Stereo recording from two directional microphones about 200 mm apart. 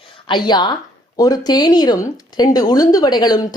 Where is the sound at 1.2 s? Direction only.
20° left (ahead or behind).